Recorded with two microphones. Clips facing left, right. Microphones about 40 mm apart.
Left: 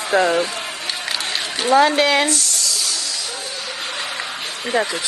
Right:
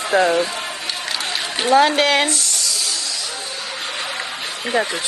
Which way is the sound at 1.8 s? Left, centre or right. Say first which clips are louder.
Even; right.